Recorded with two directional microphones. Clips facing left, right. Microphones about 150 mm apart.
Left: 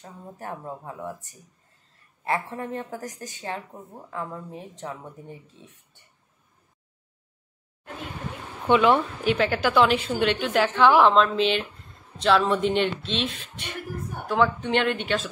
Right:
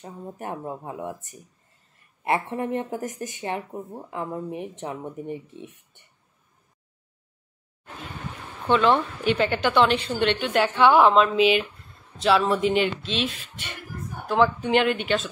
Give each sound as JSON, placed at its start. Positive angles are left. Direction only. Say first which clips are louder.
{"t": 0.0, "sound": "speech", "louder": "right 3 dB", "side_deg": -20}
{"t": 8.6, "sound": "speech", "louder": "left 1 dB", "side_deg": 10}
{"t": 9.2, "sound": "speech", "louder": "even", "side_deg": 0}